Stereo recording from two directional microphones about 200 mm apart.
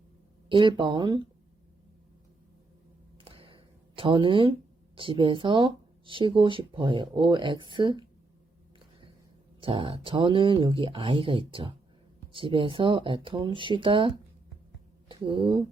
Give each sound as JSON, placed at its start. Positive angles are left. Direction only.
{"t": 0.4, "sound": "speech", "side_deg": -25}
{"t": 3.2, "sound": "a sound", "side_deg": -25}
{"t": 4.9, "sound": "speech", "side_deg": -25}
{"t": 9.6, "sound": "speech", "side_deg": -25}